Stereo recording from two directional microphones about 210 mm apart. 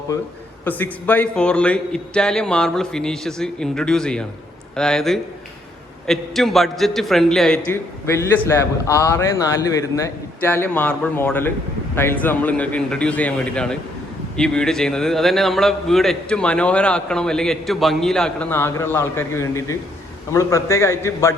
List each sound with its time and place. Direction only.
0.6 s a man's voice: 10° left (ahead or behind)